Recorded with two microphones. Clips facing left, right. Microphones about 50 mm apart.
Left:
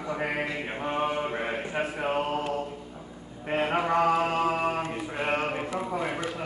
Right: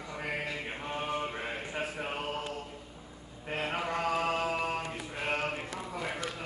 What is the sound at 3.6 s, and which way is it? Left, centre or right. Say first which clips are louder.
Mantra: left 9 dB; left.